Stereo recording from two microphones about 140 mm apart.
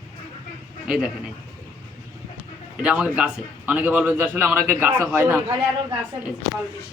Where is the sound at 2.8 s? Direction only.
5° right (ahead or behind).